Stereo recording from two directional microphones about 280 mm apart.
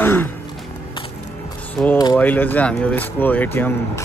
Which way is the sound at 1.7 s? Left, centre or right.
Centre.